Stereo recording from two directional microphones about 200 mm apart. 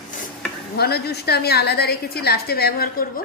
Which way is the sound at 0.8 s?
55° left (ahead or behind).